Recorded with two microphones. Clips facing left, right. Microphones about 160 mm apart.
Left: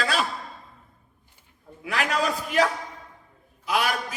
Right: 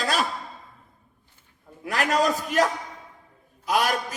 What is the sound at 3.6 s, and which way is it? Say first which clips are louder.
Speech: right 2 dB; 45° right (ahead or behind).